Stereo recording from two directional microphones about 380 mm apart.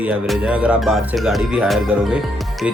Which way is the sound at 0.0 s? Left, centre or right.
Centre.